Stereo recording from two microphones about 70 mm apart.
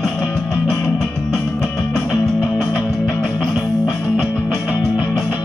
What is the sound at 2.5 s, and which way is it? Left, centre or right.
Music, centre.